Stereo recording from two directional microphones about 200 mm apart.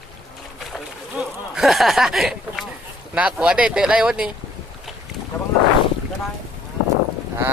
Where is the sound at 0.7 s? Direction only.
Centre (ahead or behind).